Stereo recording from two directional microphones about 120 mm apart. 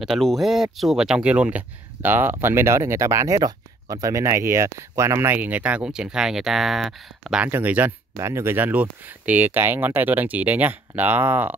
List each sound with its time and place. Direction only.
0.0 s speech: centre (ahead or behind)
7.4 s speech: 15° right (ahead or behind)